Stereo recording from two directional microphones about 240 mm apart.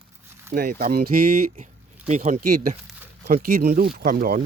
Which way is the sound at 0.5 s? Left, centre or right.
Right.